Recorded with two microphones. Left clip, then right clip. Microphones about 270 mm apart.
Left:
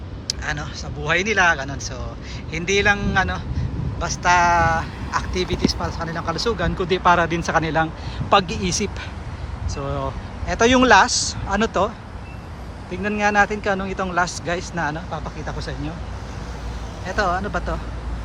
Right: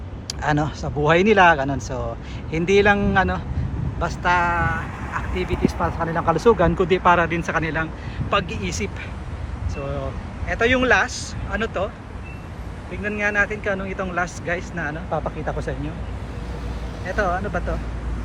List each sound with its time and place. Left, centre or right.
0.3 s speech: centre
10.5 s speech: centre
12.9 s speech: centre
17.1 s speech: centre